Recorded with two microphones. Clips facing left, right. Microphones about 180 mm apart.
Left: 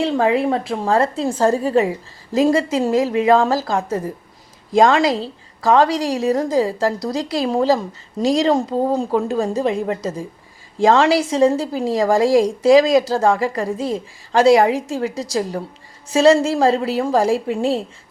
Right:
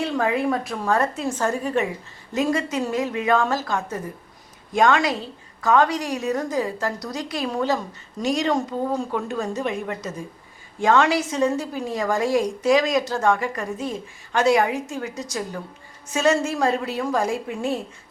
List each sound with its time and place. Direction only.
0.0 s a woman's voice: 25° left (ahead or behind)
5.0 s a woman's voice: 90° left
5.6 s a woman's voice: 30° left (ahead or behind)